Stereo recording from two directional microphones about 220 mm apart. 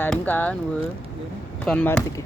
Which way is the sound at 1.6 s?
5° left (ahead or behind).